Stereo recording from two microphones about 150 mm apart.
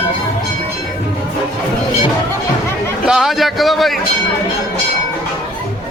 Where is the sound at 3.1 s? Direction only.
5° right (ahead or behind).